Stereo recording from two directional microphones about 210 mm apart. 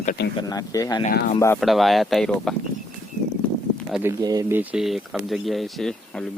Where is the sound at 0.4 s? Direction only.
15° left (ahead or behind).